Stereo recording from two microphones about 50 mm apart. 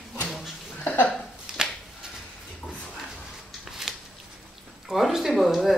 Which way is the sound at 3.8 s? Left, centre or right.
Centre.